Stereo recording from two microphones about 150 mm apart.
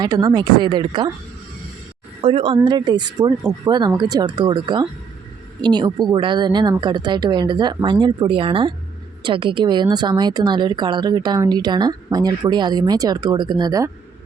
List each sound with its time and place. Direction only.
0.0 s speech: 25° right (ahead or behind)
2.2 s speech: 35° right (ahead or behind)